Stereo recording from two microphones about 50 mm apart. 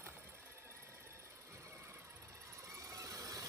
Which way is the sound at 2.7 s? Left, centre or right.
Right.